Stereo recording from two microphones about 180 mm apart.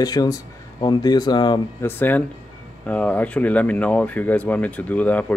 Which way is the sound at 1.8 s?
10° left (ahead or behind).